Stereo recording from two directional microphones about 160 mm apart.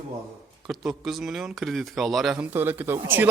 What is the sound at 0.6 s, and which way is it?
Speech, centre (ahead or behind).